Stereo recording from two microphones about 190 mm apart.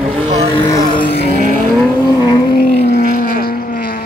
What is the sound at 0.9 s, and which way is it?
Vehicle, 25° left (ahead or behind).